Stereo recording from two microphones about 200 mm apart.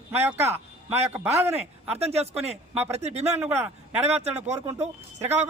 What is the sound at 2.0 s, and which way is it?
A man's voice, 30° right (ahead or behind).